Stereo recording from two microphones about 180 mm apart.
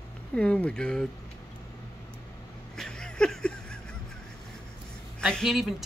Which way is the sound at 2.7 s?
5° left (ahead or behind).